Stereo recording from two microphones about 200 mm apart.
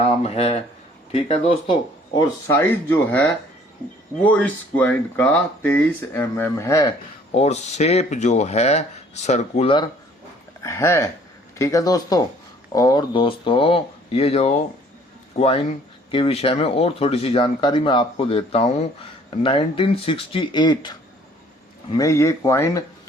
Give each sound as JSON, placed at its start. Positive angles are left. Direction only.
{"t": 0.2, "sound": "speech", "side_deg": 30}
{"t": 7.3, "sound": "speech", "side_deg": 35}
{"t": 10.6, "sound": "speech", "side_deg": 15}